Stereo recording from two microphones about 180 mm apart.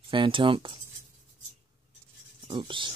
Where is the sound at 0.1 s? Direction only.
30° right (ahead or behind).